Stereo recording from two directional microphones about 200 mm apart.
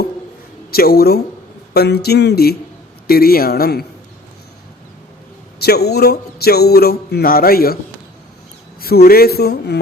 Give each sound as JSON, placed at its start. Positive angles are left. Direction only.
{"t": 0.7, "sound": "speech", "side_deg": 50}
{"t": 5.5, "sound": "speech", "side_deg": 50}
{"t": 8.8, "sound": "speech", "side_deg": 50}